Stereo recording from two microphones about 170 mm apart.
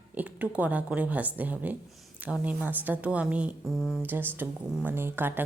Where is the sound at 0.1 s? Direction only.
10° right (ahead or behind).